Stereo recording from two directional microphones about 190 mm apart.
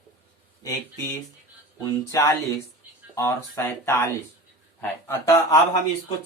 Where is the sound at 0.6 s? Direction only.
15° left (ahead or behind).